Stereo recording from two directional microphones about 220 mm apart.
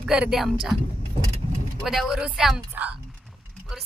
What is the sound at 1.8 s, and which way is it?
Speech, centre (ahead or behind).